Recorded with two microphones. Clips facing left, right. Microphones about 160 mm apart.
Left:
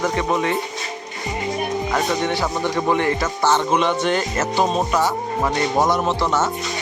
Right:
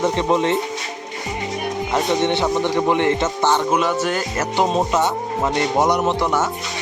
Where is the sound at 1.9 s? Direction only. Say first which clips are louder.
Right 5 dB; 25° right (ahead or behind); by 4.4 s 5° right (ahead or behind).